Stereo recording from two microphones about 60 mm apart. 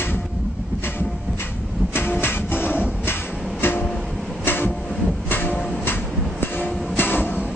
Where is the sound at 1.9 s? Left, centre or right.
Left.